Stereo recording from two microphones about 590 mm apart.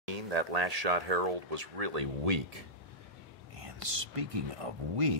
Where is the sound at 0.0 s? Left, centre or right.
Right.